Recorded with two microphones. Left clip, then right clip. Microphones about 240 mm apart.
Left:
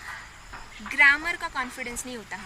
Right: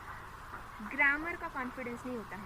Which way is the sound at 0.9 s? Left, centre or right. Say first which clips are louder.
Left 11 dB; left.